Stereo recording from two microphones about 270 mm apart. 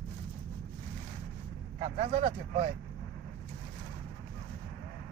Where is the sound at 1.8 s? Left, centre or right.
Right.